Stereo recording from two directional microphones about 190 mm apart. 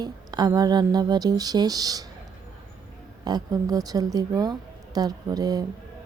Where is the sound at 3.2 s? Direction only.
20° right (ahead or behind).